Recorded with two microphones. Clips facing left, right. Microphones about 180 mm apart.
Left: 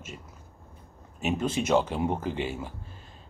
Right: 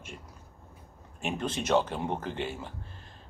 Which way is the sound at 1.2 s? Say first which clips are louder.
Left 4 dB; 5° left (ahead or behind).